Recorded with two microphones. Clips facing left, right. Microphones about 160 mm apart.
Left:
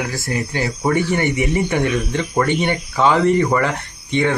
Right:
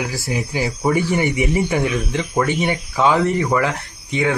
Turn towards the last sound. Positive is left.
turn(degrees=-5)  # may be behind; listen again after turning